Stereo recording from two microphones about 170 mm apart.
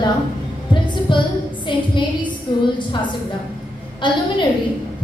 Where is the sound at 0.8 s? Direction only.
30° left (ahead or behind).